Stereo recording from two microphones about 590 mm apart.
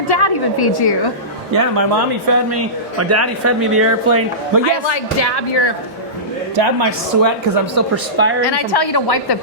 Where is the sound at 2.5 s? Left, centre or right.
Right.